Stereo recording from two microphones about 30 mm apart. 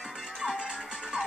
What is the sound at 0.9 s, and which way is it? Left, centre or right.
Music, right.